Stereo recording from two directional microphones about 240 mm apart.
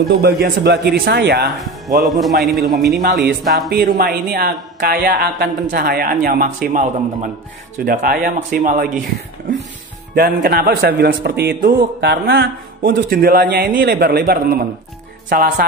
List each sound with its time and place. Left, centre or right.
0.2 s a man's voice: right
2.0 s a man's voice: centre
3.7 s a man's voice: right
10.1 s a man's voice: right